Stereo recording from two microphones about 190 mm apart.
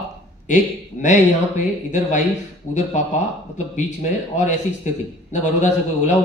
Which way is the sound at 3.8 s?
40° left (ahead or behind).